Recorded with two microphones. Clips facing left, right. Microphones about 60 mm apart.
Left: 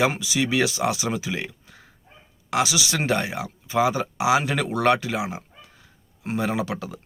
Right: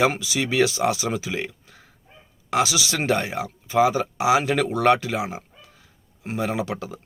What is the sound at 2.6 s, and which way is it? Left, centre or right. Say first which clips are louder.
Speech: even; left.